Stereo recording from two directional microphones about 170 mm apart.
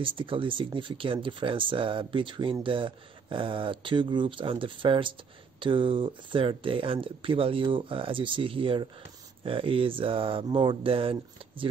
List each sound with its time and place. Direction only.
0.0 s speech: 30° right (ahead or behind)